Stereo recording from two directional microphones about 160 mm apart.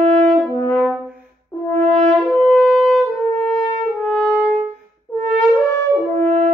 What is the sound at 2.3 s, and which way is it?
Shofar, 5° left (ahead or behind).